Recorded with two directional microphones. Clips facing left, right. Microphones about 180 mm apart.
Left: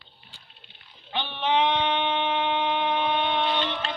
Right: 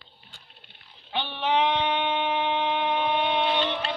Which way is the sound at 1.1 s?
10° right (ahead or behind).